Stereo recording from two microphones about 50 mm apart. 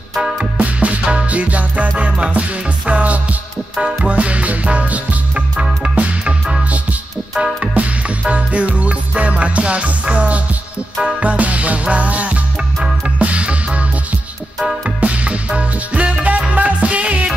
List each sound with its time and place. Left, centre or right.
0.6 s music: right
7.3 s music: centre
15.0 s music: right